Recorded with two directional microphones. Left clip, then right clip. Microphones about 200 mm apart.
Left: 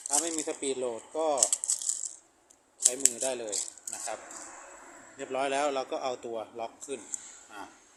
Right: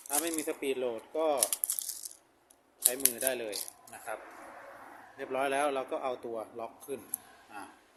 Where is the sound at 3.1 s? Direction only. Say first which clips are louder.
Left 1 dB; 15° left (ahead or behind).